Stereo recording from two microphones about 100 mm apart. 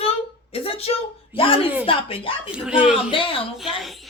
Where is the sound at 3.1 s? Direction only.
60° left (ahead or behind).